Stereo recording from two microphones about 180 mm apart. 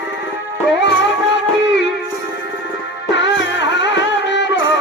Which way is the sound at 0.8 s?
80° left.